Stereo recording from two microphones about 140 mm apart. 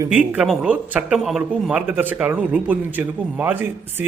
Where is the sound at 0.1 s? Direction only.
10° right (ahead or behind).